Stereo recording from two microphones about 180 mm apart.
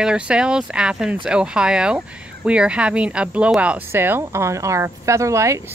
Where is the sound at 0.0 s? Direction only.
5° right (ahead or behind).